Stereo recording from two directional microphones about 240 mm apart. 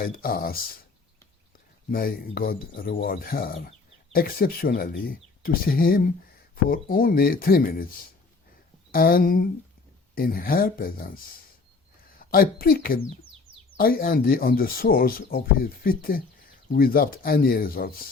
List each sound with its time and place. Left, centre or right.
0.0 s speech: left
1.9 s speech: left
8.9 s speech: left
12.2 s speech: left